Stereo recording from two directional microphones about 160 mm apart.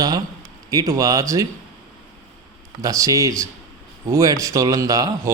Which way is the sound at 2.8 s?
20° right (ahead or behind).